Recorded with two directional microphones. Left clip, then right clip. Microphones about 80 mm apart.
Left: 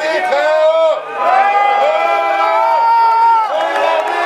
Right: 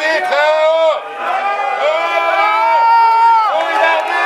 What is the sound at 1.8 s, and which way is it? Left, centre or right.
Crowd, right.